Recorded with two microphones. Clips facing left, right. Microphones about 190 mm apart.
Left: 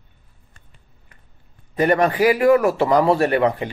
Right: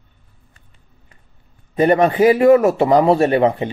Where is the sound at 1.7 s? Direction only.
20° right (ahead or behind).